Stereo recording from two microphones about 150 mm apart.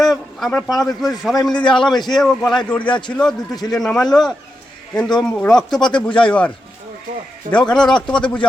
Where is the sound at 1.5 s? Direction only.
30° left (ahead or behind).